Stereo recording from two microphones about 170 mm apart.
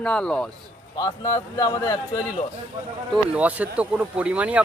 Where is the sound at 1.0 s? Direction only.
20° left (ahead or behind).